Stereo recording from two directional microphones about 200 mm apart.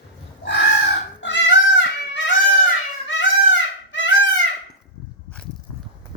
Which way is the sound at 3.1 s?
65° left (ahead or behind).